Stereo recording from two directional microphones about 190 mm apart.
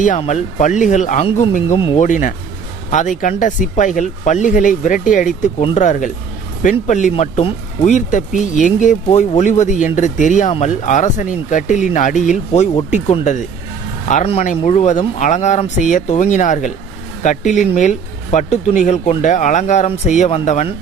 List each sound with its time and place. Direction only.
0.2 s speech: 40° left (ahead or behind)
2.0 s speech: 40° left (ahead or behind)